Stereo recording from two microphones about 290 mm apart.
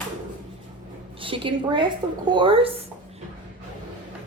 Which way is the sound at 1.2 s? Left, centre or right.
Centre.